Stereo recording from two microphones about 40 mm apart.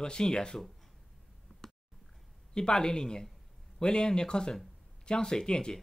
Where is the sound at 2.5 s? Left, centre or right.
Centre.